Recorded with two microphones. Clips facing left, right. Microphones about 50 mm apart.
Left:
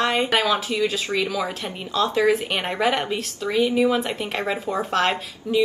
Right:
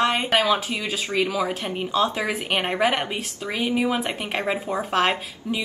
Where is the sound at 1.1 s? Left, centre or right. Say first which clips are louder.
Right 1 dB; right.